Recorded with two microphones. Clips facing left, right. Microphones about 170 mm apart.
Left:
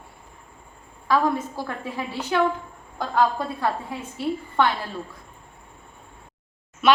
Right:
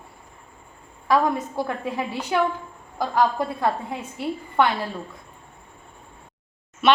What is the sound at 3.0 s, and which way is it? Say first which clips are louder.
Speech: right 1 dB; 10° right (ahead or behind).